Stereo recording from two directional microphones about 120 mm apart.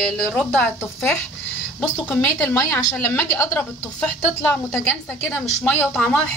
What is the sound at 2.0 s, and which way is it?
A woman's voice, 15° left (ahead or behind).